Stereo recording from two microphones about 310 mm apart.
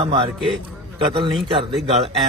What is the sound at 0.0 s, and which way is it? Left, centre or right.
A man's voice, centre.